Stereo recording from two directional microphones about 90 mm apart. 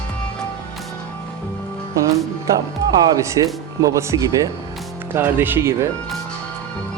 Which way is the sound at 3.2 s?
40° right (ahead or behind).